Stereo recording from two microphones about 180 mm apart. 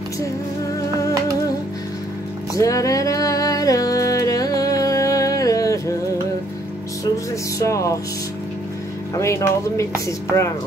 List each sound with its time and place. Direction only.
2.5 s music: 20° left (ahead or behind)
7.5 s speech: 15° left (ahead or behind)
9.1 s speech: 15° left (ahead or behind)